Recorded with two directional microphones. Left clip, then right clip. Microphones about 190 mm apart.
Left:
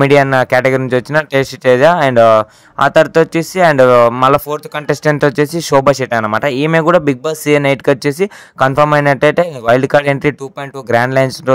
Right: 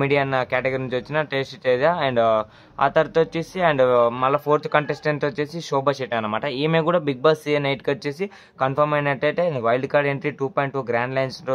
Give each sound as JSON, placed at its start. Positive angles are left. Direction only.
{"t": 0.0, "sound": "speech", "side_deg": 45}
{"t": 5.2, "sound": "speech", "side_deg": 45}
{"t": 10.4, "sound": "speech", "side_deg": 10}
{"t": 10.9, "sound": "speech", "side_deg": 45}